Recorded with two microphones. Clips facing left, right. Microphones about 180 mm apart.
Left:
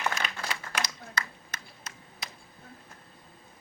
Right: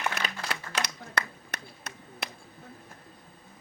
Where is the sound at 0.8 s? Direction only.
65° right (ahead or behind).